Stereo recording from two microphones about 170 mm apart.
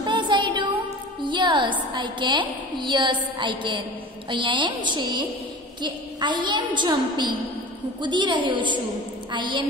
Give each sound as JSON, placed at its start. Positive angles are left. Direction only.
{"t": 0.0, "sound": "music", "side_deg": -30}
{"t": 1.2, "sound": "a woman's voice", "side_deg": -30}